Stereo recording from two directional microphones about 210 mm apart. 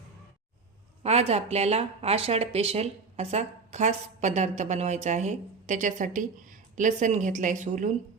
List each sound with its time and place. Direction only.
1.0 s speech: 30° right (ahead or behind)